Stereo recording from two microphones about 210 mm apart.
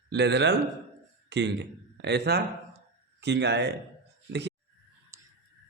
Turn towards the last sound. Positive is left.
turn(degrees=-15)  # may be behind; listen again after turning